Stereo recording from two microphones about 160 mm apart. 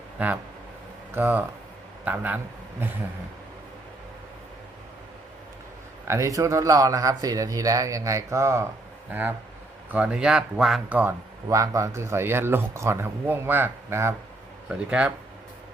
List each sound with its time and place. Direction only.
0.2 s speech: 10° right (ahead or behind)
6.1 s speech: 20° right (ahead or behind)
9.9 s speech: 5° right (ahead or behind)
11.4 s speech: 20° right (ahead or behind)